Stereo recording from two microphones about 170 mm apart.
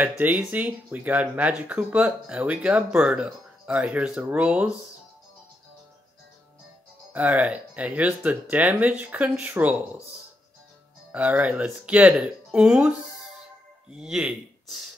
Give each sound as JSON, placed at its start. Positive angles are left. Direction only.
{"t": 0.2, "sound": "speech", "side_deg": -10}
{"t": 7.1, "sound": "speech", "side_deg": -10}
{"t": 11.1, "sound": "speech", "side_deg": -10}